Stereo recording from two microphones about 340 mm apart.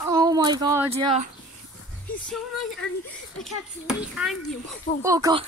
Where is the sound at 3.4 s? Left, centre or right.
Centre.